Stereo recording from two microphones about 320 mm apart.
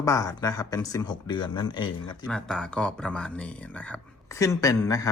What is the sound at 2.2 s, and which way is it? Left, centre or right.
Speech, centre.